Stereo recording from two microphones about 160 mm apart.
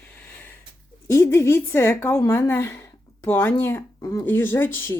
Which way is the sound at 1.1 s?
15° left (ahead or behind).